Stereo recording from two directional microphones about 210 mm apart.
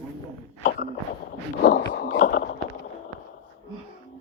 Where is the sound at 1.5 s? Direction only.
45° left (ahead or behind).